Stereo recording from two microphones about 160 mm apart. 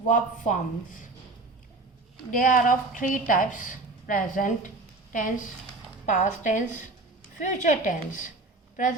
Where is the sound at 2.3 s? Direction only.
55° left (ahead or behind).